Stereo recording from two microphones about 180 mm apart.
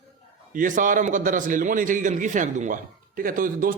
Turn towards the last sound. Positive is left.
turn(degrees=-50)  # may be behind; listen again after turning